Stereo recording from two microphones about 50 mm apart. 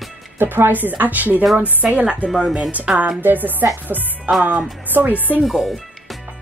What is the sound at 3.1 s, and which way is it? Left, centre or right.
Speech, right.